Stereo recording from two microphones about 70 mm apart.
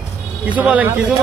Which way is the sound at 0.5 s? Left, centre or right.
Right.